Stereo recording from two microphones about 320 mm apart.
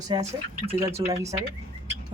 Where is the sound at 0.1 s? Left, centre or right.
Centre.